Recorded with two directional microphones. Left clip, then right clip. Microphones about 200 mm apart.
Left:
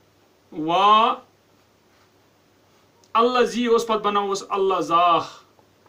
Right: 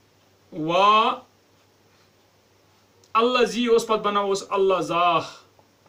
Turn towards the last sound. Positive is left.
turn(degrees=10)  # may be behind; listen again after turning